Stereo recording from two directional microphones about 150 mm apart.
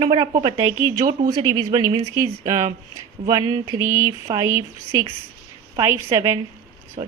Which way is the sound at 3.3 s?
25° right (ahead or behind).